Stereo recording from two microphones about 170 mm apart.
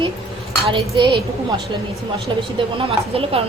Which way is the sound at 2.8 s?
35° right (ahead or behind).